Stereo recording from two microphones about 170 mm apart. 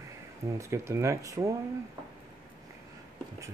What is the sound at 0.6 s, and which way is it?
Speech, 15° right (ahead or behind).